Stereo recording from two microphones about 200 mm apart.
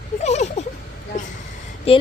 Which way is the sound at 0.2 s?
35° left (ahead or behind).